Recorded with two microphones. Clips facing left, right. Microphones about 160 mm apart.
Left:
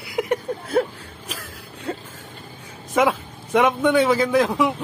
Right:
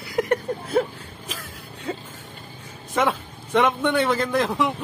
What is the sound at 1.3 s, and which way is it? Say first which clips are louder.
Vehicle: left 1 dB; centre (ahead or behind).